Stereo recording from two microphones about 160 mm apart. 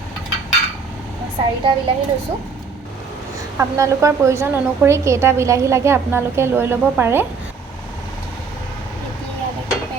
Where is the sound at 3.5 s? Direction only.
20° right (ahead or behind).